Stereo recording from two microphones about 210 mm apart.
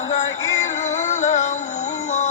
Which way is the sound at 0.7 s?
35° left (ahead or behind).